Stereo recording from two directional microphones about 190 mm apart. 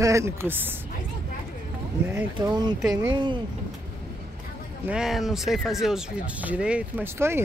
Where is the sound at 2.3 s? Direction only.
20° right (ahead or behind).